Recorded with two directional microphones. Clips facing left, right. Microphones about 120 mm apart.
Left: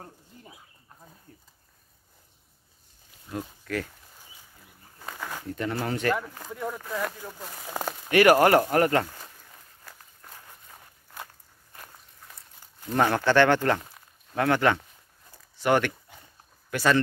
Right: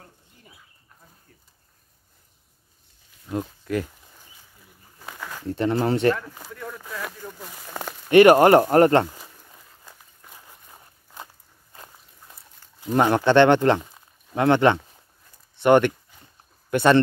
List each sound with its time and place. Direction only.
3.3 s speech: 20° right (ahead or behind)
4.9 s a sound: 5° right (ahead or behind)
5.5 s speech: 25° right (ahead or behind)
6.5 s speech: 20° left (ahead or behind)
7.0 s speech: 5° left (ahead or behind)
8.1 s speech: 25° right (ahead or behind)
9.9 s walk: 10° right (ahead or behind)
11.7 s walk: 25° right (ahead or behind)
12.8 s speech: 20° right (ahead or behind)